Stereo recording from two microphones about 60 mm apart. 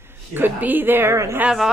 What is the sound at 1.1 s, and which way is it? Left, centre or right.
Speech, right.